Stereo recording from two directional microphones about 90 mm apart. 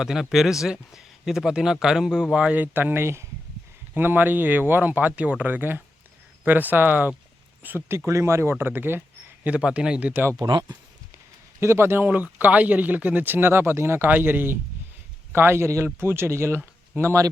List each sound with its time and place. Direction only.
0.0 s speech: 5° right (ahead or behind)
10.4 s speech: 45° right (ahead or behind)
11.6 s speech: 30° right (ahead or behind)